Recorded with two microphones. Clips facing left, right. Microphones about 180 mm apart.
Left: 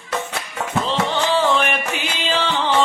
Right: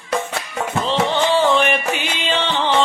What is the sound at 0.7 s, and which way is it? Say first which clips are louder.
Music: right 2 dB; centre (ahead or behind).